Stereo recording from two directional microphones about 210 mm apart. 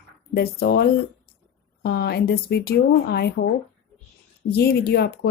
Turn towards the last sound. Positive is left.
turn(degrees=50)  # may be behind; listen again after turning